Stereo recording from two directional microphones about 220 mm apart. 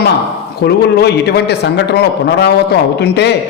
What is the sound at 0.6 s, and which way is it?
Speech, 45° left (ahead or behind).